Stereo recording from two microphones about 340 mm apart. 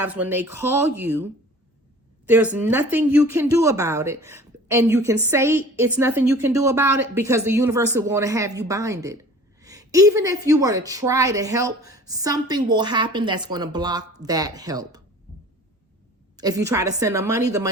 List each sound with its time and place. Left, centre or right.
0.0 s speech: centre
16.4 s speech: centre